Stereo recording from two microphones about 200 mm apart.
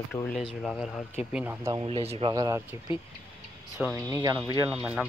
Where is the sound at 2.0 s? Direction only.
30° right (ahead or behind).